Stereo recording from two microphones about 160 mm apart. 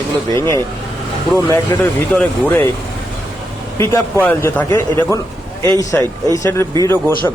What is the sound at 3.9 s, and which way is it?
A man's voice, 15° left (ahead or behind).